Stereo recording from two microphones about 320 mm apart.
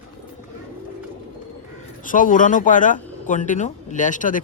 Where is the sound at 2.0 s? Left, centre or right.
Left.